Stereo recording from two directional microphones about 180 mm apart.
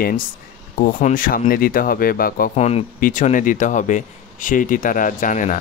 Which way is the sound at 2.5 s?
35° left (ahead or behind).